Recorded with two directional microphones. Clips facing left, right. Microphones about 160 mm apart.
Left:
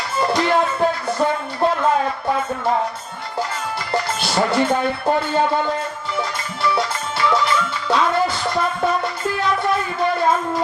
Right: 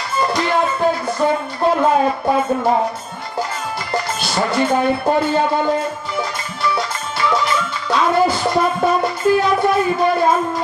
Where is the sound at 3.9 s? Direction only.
25° left (ahead or behind).